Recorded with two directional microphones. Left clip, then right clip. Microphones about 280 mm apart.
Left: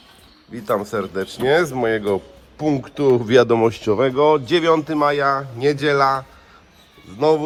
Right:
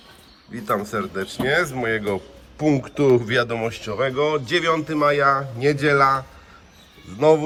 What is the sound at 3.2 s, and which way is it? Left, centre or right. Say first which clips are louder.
A man's voice: left 8 dB; centre.